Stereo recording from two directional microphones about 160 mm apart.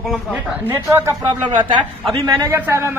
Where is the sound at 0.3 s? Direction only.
10° right (ahead or behind).